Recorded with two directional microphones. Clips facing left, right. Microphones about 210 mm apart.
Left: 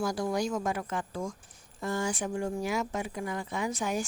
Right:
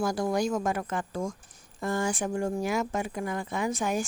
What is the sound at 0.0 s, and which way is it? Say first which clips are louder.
Speech: right 3 dB; 50° right (ahead or behind).